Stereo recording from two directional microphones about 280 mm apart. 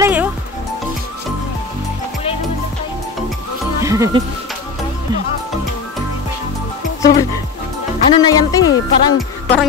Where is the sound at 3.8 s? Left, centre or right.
Centre.